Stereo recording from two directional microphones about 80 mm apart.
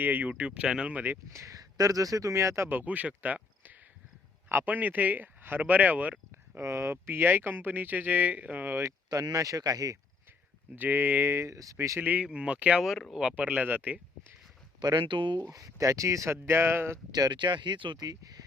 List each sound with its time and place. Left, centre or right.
0.0 s speech: right
1.3 s speech: right
2.6 s speech: right
6.6 s speech: right
9.0 s speech: right
10.8 s speech: right
11.9 s speech: right
14.8 s speech: right
15.4 s speech: right
17.1 s speech: right
18.0 s speech: right